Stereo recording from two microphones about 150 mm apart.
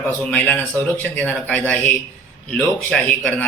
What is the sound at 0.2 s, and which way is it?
A man's voice, 10° left (ahead or behind).